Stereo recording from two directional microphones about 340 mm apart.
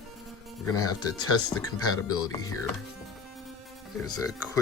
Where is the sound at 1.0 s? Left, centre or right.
Left.